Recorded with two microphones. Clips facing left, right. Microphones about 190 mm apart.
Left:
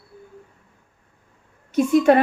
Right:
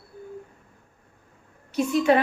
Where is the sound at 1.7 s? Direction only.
50° left (ahead or behind).